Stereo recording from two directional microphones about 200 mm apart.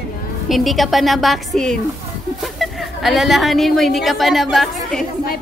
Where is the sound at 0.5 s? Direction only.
Centre (ahead or behind).